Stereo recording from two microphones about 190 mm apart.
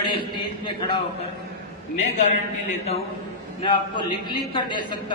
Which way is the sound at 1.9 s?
40° left (ahead or behind).